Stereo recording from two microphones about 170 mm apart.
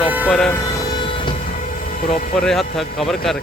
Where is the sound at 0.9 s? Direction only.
30° left (ahead or behind).